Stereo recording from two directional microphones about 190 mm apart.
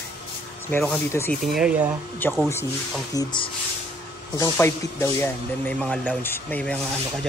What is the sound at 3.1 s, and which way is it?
Speech, 25° left (ahead or behind).